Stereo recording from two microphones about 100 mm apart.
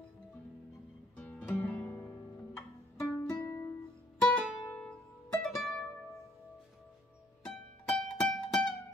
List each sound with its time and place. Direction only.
1.1 s music: 15° left (ahead or behind)
1.9 s music: 35° left (ahead or behind)
4.2 s music: 5° left (ahead or behind)
7.4 s music: 10° left (ahead or behind)